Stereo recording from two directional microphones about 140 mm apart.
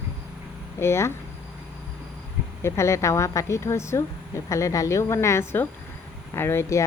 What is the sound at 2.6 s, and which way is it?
Speech, 20° left (ahead or behind).